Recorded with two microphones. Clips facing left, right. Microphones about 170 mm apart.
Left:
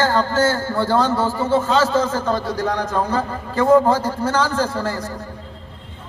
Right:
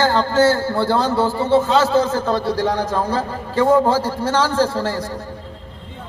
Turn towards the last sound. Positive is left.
turn(degrees=-30)  # may be behind; listen again after turning